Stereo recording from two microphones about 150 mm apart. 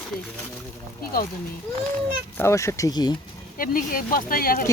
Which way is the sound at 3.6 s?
70° left (ahead or behind).